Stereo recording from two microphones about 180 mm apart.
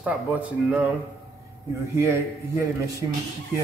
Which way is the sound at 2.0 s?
15° right (ahead or behind).